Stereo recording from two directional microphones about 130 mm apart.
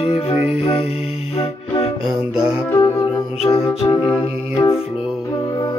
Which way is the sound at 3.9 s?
35° left (ahead or behind).